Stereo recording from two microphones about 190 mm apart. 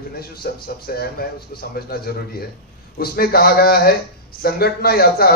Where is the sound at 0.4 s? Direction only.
55° left (ahead or behind).